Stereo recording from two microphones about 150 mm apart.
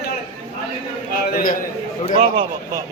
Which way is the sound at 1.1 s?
75° left (ahead or behind).